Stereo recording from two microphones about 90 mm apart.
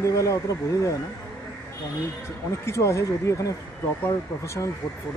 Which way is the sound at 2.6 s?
30° left (ahead or behind).